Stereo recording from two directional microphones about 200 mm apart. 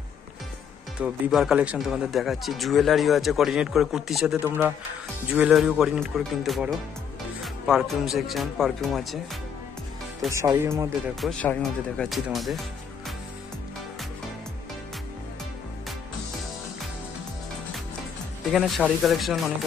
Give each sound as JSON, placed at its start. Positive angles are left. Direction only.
{"t": 0.9, "sound": "speech", "side_deg": -5}
{"t": 10.3, "sound": "speech", "side_deg": -15}
{"t": 11.1, "sound": "speech", "side_deg": 0}
{"t": 18.5, "sound": "speech", "side_deg": 0}